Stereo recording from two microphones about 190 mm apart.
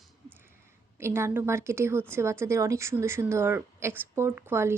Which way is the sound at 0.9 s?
15° right (ahead or behind).